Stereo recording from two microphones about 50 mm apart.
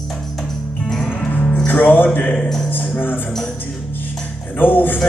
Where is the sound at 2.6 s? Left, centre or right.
Left.